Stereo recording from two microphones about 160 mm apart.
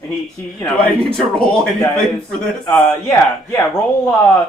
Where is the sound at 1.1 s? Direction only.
5° left (ahead or behind).